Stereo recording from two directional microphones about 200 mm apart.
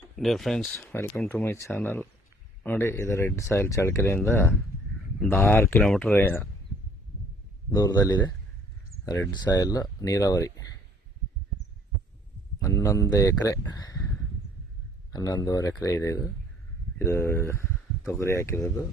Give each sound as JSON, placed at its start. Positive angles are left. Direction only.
{"t": 0.2, "sound": "speech", "side_deg": 0}
{"t": 7.7, "sound": "speech", "side_deg": 20}
{"t": 12.5, "sound": "speech", "side_deg": 15}
{"t": 15.1, "sound": "speech", "side_deg": 20}